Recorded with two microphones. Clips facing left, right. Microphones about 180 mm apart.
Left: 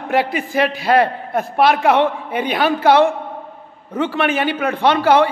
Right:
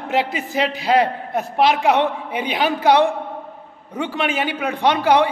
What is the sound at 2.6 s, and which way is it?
A man's voice, 15° right (ahead or behind).